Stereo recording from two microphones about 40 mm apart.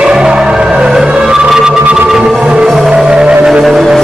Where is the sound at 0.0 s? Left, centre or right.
Centre.